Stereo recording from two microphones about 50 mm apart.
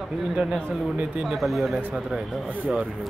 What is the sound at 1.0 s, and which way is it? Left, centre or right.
Speech, right.